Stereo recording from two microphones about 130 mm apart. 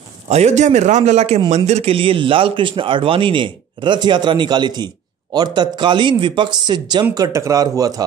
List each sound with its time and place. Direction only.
0.3 s a man's voice: 60° right (ahead or behind); by 8.0 s 30° right (ahead or behind)